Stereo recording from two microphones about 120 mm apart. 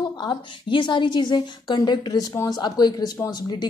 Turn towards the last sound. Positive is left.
turn(degrees=35)  # may be behind; listen again after turning